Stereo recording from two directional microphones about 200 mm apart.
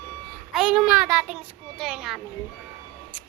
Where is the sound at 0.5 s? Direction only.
5° right (ahead or behind).